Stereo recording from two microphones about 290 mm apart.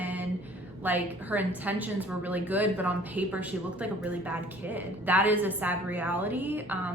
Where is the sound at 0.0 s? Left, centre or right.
Centre.